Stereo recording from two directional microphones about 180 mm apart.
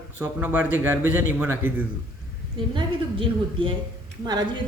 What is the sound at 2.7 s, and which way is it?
A woman's voice, 30° right (ahead or behind).